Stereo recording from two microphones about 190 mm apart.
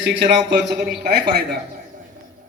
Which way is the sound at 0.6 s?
60° right (ahead or behind).